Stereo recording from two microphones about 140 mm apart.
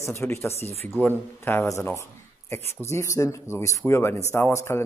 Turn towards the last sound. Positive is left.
turn(degrees=20)  # may be behind; listen again after turning